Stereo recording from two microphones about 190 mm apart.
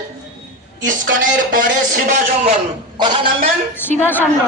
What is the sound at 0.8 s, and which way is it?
Speech, 45° right (ahead or behind).